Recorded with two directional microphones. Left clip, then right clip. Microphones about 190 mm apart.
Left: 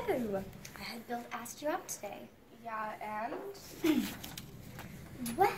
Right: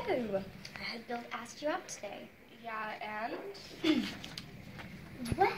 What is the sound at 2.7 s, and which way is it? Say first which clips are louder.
Speech: even; 15° left (ahead or behind).